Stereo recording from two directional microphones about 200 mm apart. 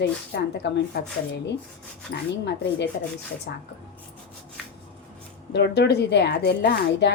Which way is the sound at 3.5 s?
50° left (ahead or behind).